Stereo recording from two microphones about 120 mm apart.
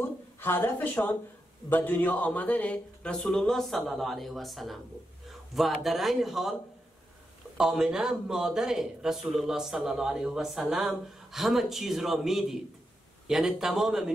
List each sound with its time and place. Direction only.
0.0 s a woman's voice: 20° left (ahead or behind); by 6.5 s centre (ahead or behind)
7.5 s a man's voice: 5° right (ahead or behind)